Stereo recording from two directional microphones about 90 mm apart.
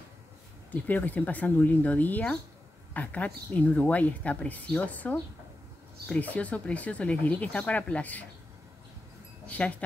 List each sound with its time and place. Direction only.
0.7 s speech: 20° left (ahead or behind)
9.5 s speech: 15° left (ahead or behind)